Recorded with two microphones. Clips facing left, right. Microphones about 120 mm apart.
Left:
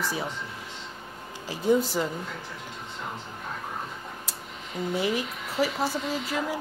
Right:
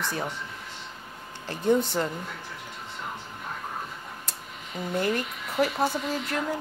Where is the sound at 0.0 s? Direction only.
5° left (ahead or behind).